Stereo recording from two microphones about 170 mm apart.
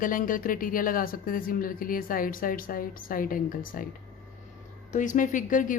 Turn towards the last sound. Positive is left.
turn(degrees=50)  # may be behind; listen again after turning